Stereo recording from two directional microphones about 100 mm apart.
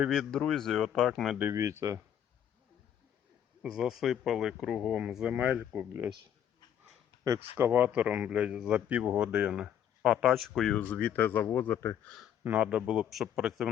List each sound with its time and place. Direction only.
0.1 s speech: 5° left (ahead or behind)
1.5 s speech: 30° right (ahead or behind)
3.6 s speech: 5° right (ahead or behind)
7.5 s speech: 20° right (ahead or behind); by 10.8 s centre (ahead or behind)
10.8 s speech: 15° left (ahead or behind)
12.4 s speech: 15° right (ahead or behind)